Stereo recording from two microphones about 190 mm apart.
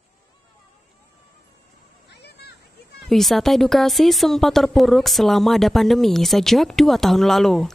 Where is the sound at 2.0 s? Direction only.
60° left (ahead or behind).